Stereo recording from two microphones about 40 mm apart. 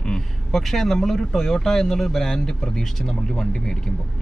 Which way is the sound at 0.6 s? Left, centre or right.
Centre.